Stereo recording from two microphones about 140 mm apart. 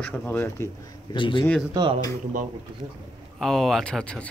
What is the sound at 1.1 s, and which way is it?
Speech, 35° left (ahead or behind).